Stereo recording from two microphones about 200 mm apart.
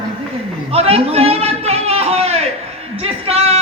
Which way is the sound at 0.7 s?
30° right (ahead or behind).